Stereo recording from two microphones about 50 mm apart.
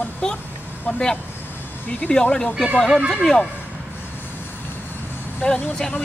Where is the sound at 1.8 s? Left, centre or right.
Left.